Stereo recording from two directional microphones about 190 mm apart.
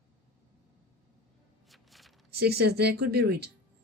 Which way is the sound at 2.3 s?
55° right (ahead or behind).